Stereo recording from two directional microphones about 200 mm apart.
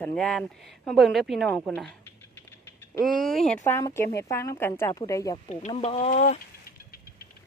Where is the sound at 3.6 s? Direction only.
15° left (ahead or behind).